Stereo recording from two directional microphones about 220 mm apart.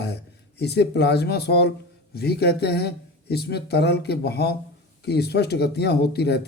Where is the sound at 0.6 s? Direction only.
50° left (ahead or behind).